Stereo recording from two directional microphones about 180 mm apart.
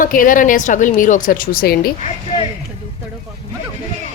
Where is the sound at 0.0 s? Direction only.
50° left (ahead or behind).